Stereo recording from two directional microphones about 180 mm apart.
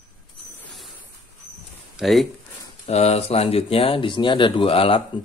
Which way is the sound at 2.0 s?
Centre (ahead or behind).